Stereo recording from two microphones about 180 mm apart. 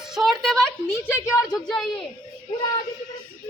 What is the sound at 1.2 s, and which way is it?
Speech, 15° left (ahead or behind).